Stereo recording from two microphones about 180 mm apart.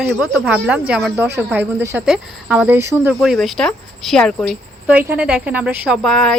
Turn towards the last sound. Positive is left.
turn(degrees=0)  # may be behind; listen again after turning